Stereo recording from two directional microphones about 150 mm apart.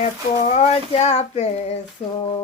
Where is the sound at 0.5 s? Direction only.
45° left (ahead or behind).